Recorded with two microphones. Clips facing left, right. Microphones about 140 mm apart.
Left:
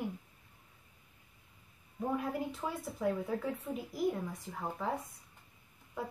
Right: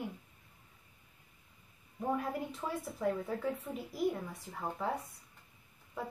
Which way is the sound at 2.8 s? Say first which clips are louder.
Left 1 dB; centre (ahead or behind).